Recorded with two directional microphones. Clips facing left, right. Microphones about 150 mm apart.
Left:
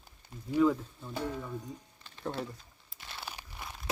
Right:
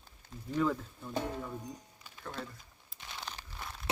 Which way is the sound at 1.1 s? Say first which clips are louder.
Even; 20° right (ahead or behind).